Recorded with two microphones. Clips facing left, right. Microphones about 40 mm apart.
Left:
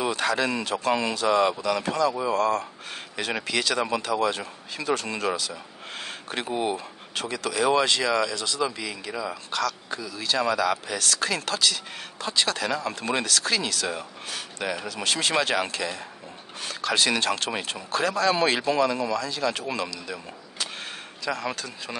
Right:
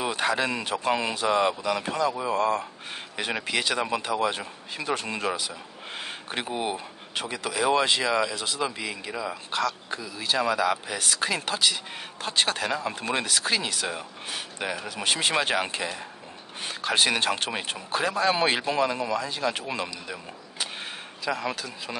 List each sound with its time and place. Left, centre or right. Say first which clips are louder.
0.0 s a man's voice: left 1 dB; centre
12.6 s a man's voice: left 1 dB; centre
21.3 s speech: even; centre